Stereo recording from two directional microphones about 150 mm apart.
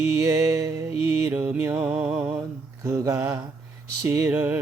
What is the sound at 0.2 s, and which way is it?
Music, 20° right (ahead or behind).